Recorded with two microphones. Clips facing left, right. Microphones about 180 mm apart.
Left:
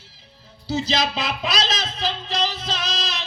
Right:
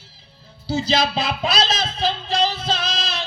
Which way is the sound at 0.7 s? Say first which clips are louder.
Right 3 dB; 30° right (ahead or behind).